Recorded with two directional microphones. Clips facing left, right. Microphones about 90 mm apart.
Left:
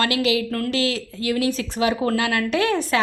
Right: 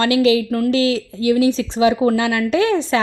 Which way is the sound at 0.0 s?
30° right (ahead or behind).